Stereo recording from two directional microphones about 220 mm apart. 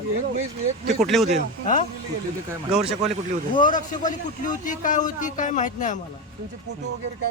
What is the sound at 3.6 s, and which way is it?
A man's voice, 35° left (ahead or behind).